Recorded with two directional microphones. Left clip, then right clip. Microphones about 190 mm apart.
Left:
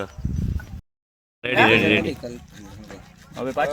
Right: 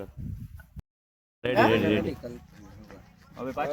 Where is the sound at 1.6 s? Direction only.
5° right (ahead or behind).